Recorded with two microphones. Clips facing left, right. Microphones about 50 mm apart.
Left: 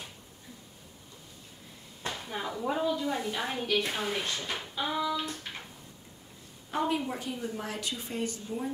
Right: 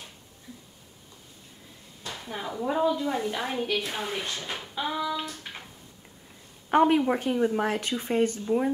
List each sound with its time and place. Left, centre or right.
2.2 s a woman's voice: centre
6.7 s a woman's voice: right